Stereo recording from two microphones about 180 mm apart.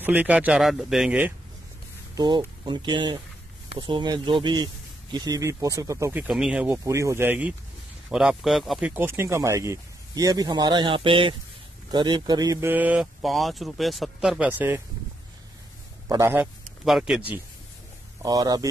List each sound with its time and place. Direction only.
0.0 s speech: 10° right (ahead or behind)
2.1 s speech: 25° right (ahead or behind); by 14.8 s 10° right (ahead or behind)
16.1 s speech: 15° right (ahead or behind)
16.8 s speech: centre (ahead or behind)
18.2 s speech: 20° right (ahead or behind)